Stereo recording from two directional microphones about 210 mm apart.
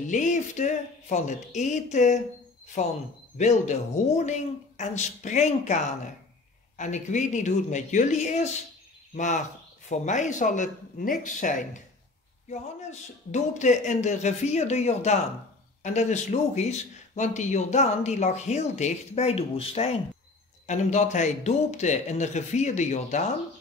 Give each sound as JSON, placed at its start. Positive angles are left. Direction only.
{"t": 0.1, "sound": "speech", "side_deg": 35}
{"t": 13.3, "sound": "speech", "side_deg": 35}